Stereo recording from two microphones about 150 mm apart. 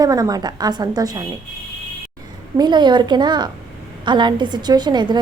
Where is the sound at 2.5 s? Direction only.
30° right (ahead or behind).